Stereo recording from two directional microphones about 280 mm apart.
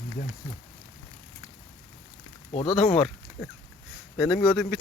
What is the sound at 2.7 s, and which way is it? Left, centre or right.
Speech, centre.